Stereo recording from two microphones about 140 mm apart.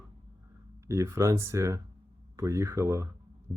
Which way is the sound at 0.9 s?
20° right (ahead or behind).